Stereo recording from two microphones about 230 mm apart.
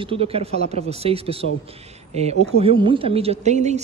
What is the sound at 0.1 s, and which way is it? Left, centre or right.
A man's voice, right.